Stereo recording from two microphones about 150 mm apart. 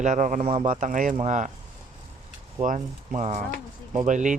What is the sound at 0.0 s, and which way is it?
Speech, 55° right (ahead or behind).